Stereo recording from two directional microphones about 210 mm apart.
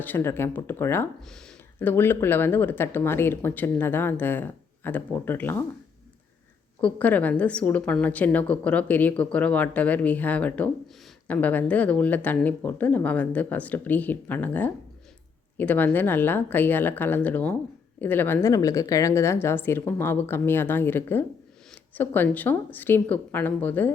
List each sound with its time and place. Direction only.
0.0 s speech: 10° left (ahead or behind)
6.8 s speech: 5° left (ahead or behind)